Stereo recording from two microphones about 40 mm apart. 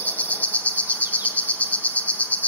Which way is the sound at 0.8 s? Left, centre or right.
Right.